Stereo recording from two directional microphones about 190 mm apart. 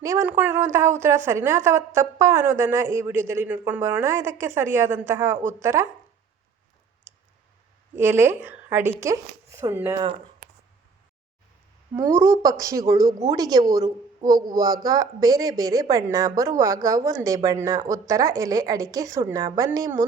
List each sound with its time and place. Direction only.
0.0 s a woman's voice: 15° right (ahead or behind)
5.4 s a woman's voice: 40° right (ahead or behind)
5.6 s a woman's voice: 15° right (ahead or behind)
7.9 s a woman's voice: 10° right (ahead or behind)
11.9 s a woman's voice: 15° right (ahead or behind)